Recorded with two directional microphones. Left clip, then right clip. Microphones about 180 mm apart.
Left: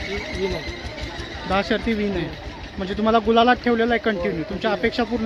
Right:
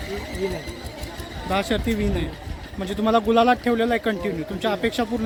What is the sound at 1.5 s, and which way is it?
Speech, 10° right (ahead or behind).